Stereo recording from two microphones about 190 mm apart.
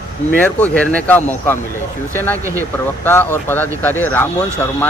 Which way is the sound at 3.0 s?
10° left (ahead or behind).